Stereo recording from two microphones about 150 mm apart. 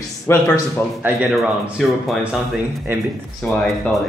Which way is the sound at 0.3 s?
15° left (ahead or behind).